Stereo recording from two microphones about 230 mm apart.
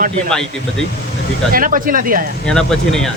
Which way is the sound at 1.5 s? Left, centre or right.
Right.